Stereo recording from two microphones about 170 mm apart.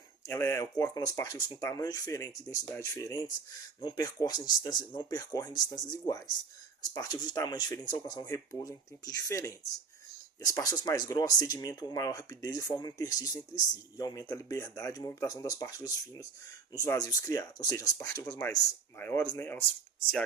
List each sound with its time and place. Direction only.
0.3 s speech: 15° left (ahead or behind)